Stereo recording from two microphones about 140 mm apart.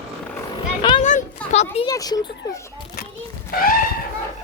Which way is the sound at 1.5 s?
45° left (ahead or behind).